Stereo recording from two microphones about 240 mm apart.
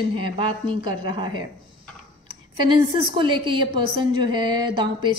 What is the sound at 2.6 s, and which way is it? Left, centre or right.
A woman's voice, centre.